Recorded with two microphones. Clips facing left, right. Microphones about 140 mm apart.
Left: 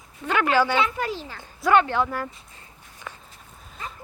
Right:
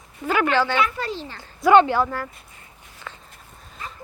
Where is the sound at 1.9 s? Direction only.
5° right (ahead or behind).